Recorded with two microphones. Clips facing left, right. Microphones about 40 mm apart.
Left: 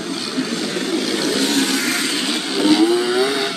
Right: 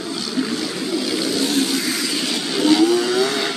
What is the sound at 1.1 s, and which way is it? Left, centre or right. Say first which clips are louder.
Vehicle: left 1 dB; left.